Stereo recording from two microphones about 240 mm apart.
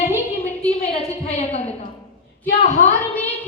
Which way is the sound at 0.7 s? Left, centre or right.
Left.